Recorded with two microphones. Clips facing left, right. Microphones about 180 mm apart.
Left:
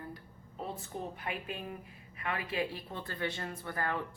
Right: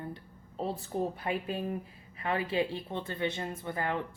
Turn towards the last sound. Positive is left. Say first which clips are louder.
# right 3 dB
turn(degrees=-20)  # may be behind; listen again after turning